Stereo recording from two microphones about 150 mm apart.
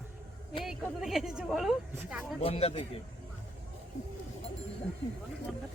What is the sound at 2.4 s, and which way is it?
Speech, 40° left (ahead or behind).